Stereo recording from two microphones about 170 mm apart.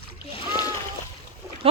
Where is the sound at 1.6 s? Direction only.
35° right (ahead or behind).